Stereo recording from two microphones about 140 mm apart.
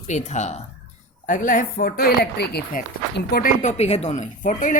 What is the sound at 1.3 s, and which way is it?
Speech, 70° left (ahead or behind).